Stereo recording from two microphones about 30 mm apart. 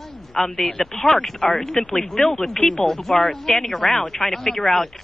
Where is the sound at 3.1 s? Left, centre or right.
Centre.